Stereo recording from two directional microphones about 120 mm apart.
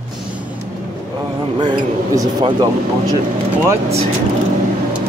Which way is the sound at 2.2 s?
35° right (ahead or behind).